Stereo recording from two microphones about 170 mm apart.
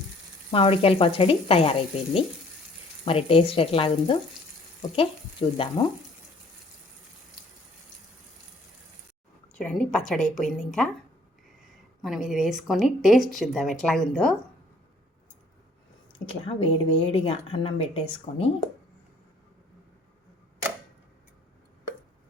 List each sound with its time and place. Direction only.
0.5 s a woman's voice: 35° left (ahead or behind)
3.0 s a woman's voice: 35° left (ahead or behind)
4.8 s frying: 30° left (ahead or behind)
9.6 s speech: 5° left (ahead or behind)
12.0 s speech: centre (ahead or behind)
16.1 s a woman's voice: 30° left (ahead or behind)